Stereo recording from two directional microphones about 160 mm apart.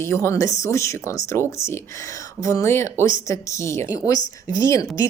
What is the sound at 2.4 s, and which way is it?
A woman's voice, 15° left (ahead or behind).